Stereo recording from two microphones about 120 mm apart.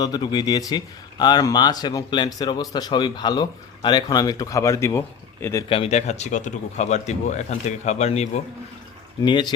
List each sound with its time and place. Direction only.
0.0 s a man's voice: 35° left (ahead or behind)
5.6 s speech: 50° left (ahead or behind)
5.9 s speech: 70° left (ahead or behind)
9.2 s a man's voice: 40° left (ahead or behind)